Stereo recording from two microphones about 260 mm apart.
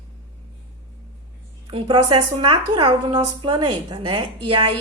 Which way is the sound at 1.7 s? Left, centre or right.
Centre.